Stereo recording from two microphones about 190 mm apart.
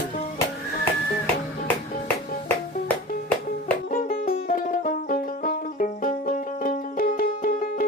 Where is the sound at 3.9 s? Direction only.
50° left (ahead or behind).